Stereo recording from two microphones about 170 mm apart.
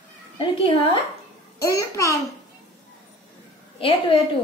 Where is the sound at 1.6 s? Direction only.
20° left (ahead or behind).